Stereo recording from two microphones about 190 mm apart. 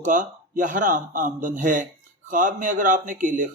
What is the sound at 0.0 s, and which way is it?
A man's voice, 45° right (ahead or behind).